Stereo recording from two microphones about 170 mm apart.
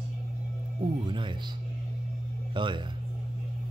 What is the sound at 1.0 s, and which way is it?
Music, 30° right (ahead or behind).